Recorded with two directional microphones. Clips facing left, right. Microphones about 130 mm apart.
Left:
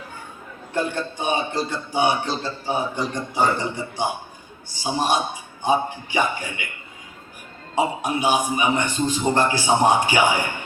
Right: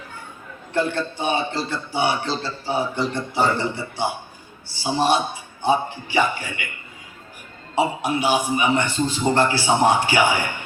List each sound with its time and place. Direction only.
0.7 s a man's voice: 15° left (ahead or behind)
7.8 s a man's voice: 15° left (ahead or behind)